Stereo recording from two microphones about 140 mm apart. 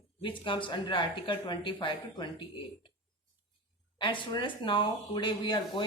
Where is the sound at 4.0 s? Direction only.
35° left (ahead or behind).